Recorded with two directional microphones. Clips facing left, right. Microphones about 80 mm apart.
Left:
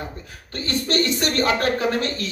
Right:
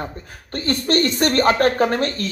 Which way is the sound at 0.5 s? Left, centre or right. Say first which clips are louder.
Right 4 dB; right.